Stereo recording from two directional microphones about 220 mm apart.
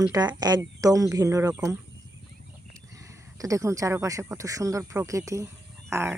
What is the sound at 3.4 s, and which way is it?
Speech, 15° right (ahead or behind).